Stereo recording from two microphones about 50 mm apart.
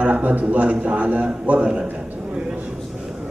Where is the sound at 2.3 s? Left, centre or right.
Right.